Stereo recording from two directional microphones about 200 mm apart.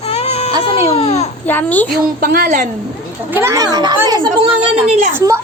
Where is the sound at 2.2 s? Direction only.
50° right (ahead or behind).